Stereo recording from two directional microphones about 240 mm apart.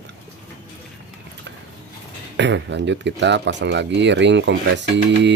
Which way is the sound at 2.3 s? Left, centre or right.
Right.